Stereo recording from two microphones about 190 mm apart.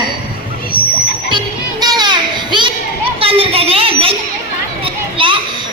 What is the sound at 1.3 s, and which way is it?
Music, 25° right (ahead or behind).